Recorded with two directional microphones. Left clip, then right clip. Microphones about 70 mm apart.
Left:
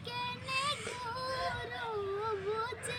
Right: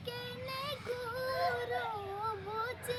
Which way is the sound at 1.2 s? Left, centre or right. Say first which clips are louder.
Right 4 dB; right.